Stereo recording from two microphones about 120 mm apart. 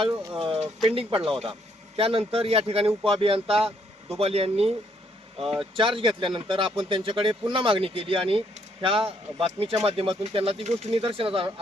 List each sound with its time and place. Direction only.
0.3 s speech: 55° right (ahead or behind)
5.4 s speech: centre (ahead or behind)
5.7 s speech: 45° right (ahead or behind)